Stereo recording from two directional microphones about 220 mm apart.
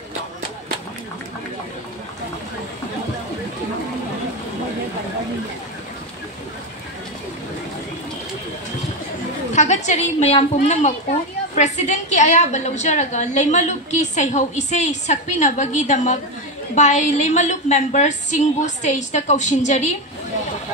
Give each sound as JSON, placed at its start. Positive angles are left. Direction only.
{"t": 9.5, "sound": "a woman's voice", "side_deg": 30}